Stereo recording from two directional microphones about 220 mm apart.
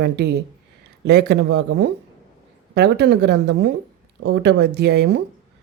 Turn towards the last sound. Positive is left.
turn(degrees=-50)  # may be behind; listen again after turning